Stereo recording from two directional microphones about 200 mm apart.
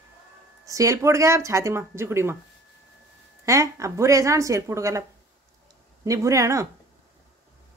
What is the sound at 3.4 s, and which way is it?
Speech, 15° right (ahead or behind).